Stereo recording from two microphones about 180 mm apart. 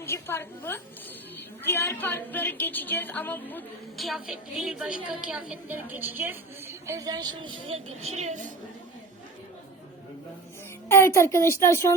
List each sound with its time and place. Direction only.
0.0 s a woman's voice: 15° left (ahead or behind)
3.9 s a woman's voice: centre (ahead or behind); by 8.4 s 40° right (ahead or behind)
10.8 s a woman's voice: 15° left (ahead or behind)